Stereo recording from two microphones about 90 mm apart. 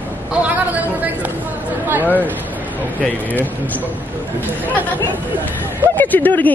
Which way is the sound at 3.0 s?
20° left (ahead or behind).